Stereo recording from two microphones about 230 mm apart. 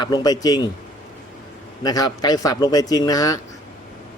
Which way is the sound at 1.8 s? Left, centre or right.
Centre.